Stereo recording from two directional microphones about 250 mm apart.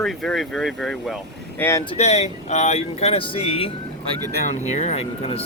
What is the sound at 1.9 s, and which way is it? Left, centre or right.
Speech, left.